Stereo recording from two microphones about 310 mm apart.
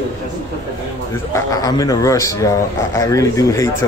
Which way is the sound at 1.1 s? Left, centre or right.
Centre.